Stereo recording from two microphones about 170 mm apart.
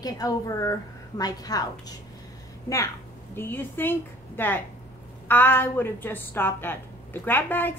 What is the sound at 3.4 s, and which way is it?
Speech, 10° left (ahead or behind).